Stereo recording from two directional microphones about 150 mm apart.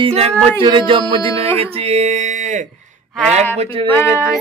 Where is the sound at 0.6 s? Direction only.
35° right (ahead or behind); by 2.7 s 55° right (ahead or behind).